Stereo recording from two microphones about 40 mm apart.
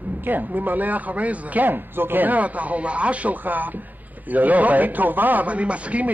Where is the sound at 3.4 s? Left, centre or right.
Right.